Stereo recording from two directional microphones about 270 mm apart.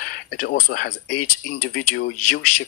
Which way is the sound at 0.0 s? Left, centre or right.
Left.